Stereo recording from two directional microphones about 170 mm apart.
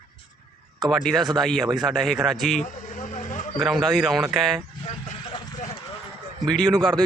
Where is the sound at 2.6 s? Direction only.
45° left (ahead or behind).